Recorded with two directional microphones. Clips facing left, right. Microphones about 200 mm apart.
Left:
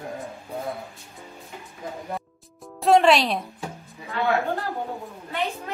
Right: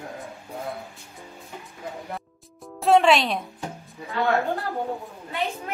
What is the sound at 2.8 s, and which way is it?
Music, centre (ahead or behind).